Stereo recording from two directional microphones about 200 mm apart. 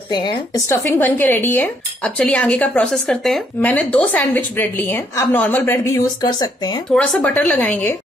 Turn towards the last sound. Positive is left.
turn(degrees=10)  # may be behind; listen again after turning